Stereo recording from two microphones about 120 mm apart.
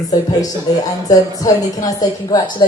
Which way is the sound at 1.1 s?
30° left (ahead or behind).